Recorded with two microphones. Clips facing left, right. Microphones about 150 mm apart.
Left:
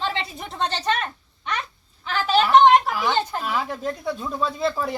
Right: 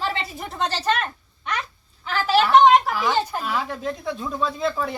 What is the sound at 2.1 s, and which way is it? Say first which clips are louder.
A woman's voice: even; centre (ahead or behind).